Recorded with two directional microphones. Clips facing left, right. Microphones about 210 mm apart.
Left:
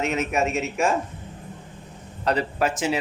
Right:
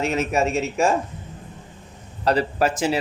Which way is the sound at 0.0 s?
35° right (ahead or behind).